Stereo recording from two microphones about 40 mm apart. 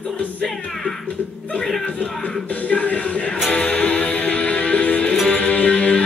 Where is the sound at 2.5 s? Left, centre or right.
Left.